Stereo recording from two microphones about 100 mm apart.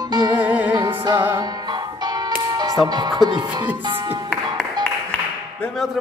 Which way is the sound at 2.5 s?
40° right (ahead or behind).